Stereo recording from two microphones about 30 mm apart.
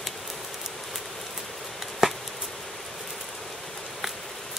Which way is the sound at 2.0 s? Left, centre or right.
Centre.